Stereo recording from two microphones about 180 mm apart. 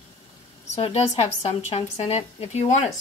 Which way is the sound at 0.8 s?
35° left (ahead or behind).